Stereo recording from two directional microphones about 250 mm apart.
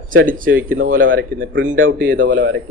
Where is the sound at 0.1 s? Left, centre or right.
Right.